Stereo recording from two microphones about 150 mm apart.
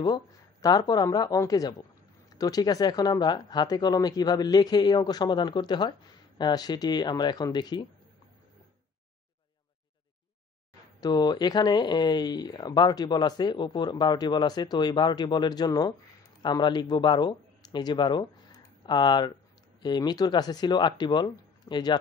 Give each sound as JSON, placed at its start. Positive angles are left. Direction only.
{"t": 0.0, "sound": "speech", "side_deg": 25}
{"t": 11.0, "sound": "speech", "side_deg": 25}